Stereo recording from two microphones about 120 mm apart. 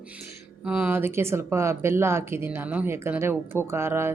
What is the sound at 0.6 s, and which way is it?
Speech, 10° right (ahead or behind).